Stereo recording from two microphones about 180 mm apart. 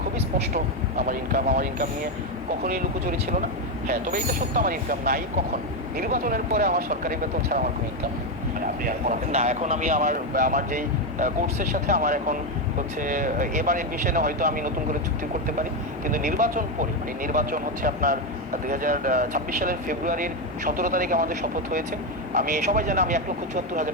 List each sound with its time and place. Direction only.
2.6 s speech: 50° right (ahead or behind)
8.8 s speech: 45° right (ahead or behind)
16.0 s speech: 50° right (ahead or behind)